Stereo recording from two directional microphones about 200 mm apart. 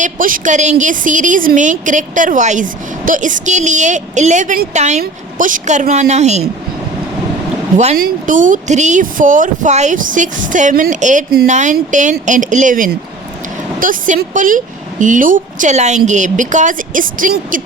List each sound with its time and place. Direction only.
0.0 s a woman's voice: 45° right (ahead or behind)
7.9 s a woman's voice: 45° right (ahead or behind)